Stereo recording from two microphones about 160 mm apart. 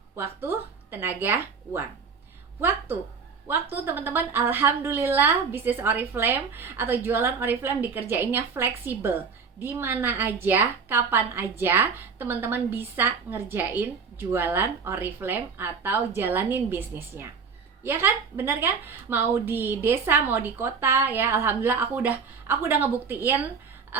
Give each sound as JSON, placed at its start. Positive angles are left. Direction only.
{"t": 0.2, "sound": "speech", "side_deg": -15}
{"t": 3.4, "sound": "a woman's voice", "side_deg": -15}